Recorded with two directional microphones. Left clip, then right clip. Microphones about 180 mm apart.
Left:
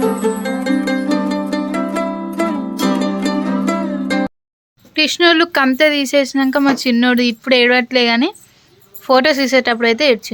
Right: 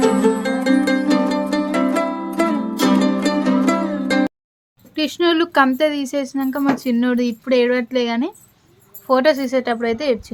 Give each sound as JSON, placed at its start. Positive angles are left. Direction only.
{"t": 0.0, "sound": "music", "side_deg": 0}
{"t": 4.9, "sound": "speech", "side_deg": 10}